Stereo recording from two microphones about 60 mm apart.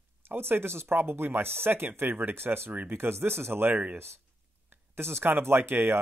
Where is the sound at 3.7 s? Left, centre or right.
Right.